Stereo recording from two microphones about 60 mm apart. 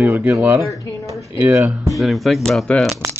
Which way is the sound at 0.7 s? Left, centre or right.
Left.